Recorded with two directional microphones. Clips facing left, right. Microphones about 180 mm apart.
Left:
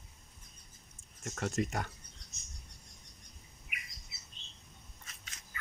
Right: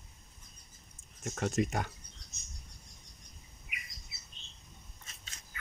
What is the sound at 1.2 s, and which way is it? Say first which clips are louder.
Speech: right 3 dB; 20° right (ahead or behind).